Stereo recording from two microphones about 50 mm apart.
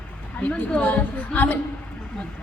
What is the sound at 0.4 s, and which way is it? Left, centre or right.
A woman's voice, left.